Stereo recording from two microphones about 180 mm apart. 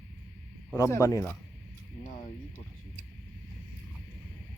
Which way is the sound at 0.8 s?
15° left (ahead or behind).